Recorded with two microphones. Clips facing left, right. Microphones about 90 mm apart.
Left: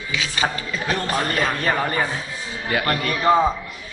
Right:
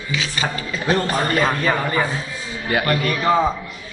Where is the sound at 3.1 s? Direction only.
10° left (ahead or behind).